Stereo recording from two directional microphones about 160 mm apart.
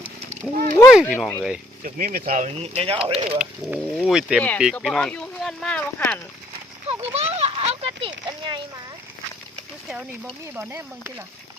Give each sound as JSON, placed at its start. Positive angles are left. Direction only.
{"t": 0.5, "sound": "a sound", "side_deg": -55}
{"t": 0.9, "sound": "speech", "side_deg": 0}
{"t": 1.8, "sound": "speech", "side_deg": -60}
{"t": 2.6, "sound": "speech", "side_deg": -35}
{"t": 3.3, "sound": "speech", "side_deg": -5}
{"t": 4.4, "sound": "speech", "side_deg": 10}
{"t": 7.1, "sound": "a sound", "side_deg": -40}
{"t": 9.9, "sound": "speech", "side_deg": -5}